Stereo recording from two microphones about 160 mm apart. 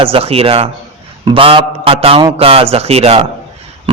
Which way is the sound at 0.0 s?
35° right (ahead or behind).